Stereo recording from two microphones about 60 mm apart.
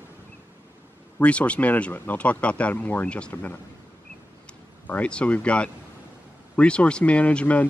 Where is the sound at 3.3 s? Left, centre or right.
Left.